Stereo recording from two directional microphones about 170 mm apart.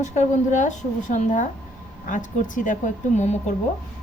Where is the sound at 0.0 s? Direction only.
45° left (ahead or behind).